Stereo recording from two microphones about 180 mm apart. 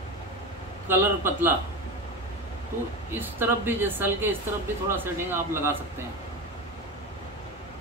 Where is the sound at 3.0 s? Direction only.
10° right (ahead or behind).